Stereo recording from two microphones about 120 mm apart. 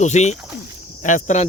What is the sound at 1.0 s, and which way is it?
Speech, 85° left.